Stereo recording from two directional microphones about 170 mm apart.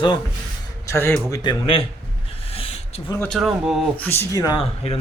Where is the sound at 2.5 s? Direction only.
35° left (ahead or behind).